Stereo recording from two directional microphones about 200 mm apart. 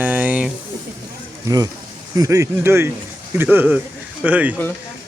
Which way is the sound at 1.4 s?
20° right (ahead or behind).